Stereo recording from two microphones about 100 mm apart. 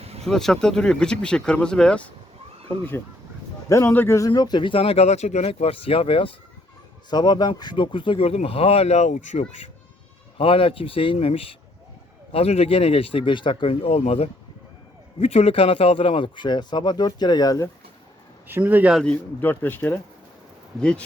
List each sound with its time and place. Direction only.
0.0 s a sound: 90° right
0.3 s speech: 5° left (ahead or behind)
3.7 s speech: 30° left (ahead or behind)
4.3 s speech: 45° left (ahead or behind); by 6.3 s 65° left (ahead or behind)
7.1 s speech: 45° left (ahead or behind); by 9.5 s 90° left
10.3 s speech: 65° left (ahead or behind)
12.3 s speech: 85° left; by 17.6 s 40° left (ahead or behind)
18.4 s speech: 20° right (ahead or behind)
18.9 s speech: 10° left (ahead or behind)